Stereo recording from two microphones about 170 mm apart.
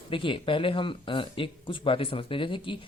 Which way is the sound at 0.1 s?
30° left (ahead or behind).